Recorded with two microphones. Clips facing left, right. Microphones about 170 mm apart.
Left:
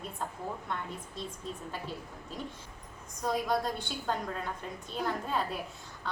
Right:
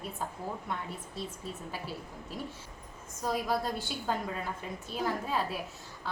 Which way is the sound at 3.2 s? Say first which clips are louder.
Left 1 dB; 5° right (ahead or behind).